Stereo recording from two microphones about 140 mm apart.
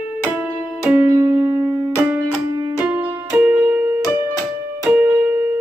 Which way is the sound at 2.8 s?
10° right (ahead or behind).